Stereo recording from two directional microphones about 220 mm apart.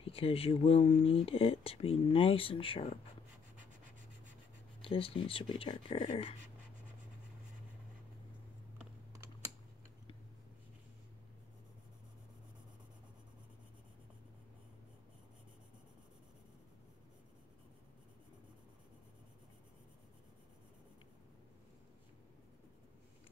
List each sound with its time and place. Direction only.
0.0 s speech: 25° left (ahead or behind)
4.8 s speech: 25° left (ahead or behind)
8.7 s typing: 10° right (ahead or behind)